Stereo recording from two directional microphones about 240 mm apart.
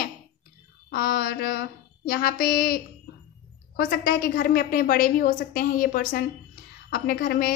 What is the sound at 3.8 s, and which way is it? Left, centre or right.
A woman's voice, left.